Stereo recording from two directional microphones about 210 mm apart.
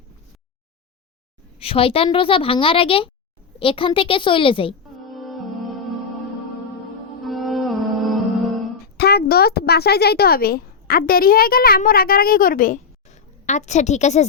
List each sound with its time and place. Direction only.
1.5 s a woman's voice: 25° left (ahead or behind)
5.0 s music: centre (ahead or behind)
7.3 s music: centre (ahead or behind)
9.0 s a woman's voice: 50° left (ahead or behind); by 14.3 s 35° left (ahead or behind)